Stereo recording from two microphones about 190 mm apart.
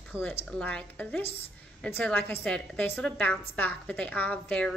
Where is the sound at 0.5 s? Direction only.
5° left (ahead or behind).